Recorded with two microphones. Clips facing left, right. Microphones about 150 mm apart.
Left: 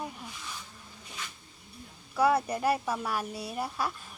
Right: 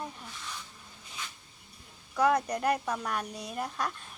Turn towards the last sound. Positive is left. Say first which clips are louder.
# left 1 dB
turn(degrees=5)  # may be behind; listen again after turning